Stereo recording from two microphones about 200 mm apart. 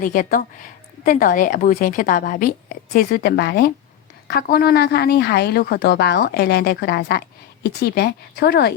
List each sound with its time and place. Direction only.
0.0 s a woman's voice: 40° left (ahead or behind)